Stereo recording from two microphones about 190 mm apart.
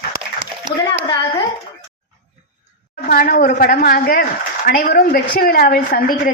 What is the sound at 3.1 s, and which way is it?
A woman's voice, 50° left (ahead or behind).